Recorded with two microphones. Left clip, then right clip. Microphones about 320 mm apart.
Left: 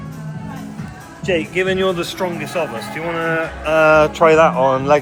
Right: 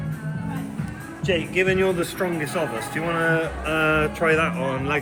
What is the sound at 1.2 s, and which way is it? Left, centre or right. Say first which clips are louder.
Speech: left 4 dB; left.